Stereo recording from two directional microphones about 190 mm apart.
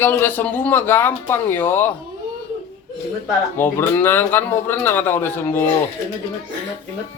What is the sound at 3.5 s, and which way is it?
Speech, 10° left (ahead or behind).